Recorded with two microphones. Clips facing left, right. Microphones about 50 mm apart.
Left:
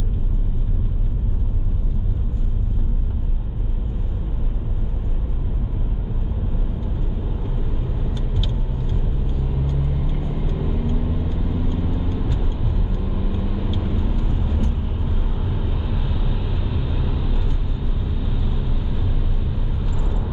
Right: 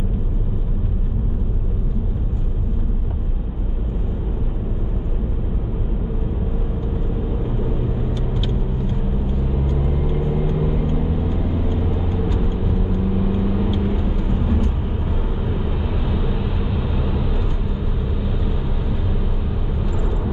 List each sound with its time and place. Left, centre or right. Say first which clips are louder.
9.7 s vehicle: right 4 dB; right
16.0 s vehicle: right 4 dB; centre